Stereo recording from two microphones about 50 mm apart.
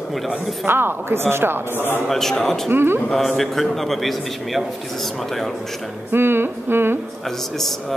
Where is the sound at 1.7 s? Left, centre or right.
Left.